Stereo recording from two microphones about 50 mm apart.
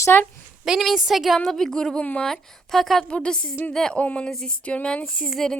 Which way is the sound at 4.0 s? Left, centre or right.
Left.